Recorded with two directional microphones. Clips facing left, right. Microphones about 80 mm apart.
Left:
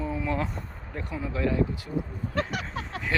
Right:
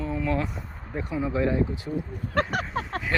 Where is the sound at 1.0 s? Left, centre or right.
Right.